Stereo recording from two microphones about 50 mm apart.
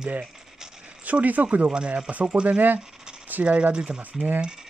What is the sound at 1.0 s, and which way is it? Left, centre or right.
Speech, right.